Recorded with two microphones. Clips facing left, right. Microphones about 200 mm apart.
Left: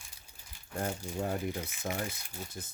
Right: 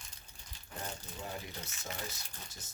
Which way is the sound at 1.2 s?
55° left (ahead or behind).